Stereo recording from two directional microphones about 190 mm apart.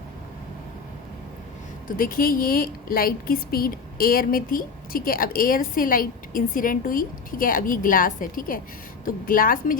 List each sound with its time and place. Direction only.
1.9 s a woman's voice: 50° left (ahead or behind)